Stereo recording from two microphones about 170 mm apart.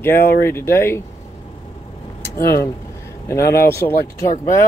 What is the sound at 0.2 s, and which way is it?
Speech, 65° left (ahead or behind).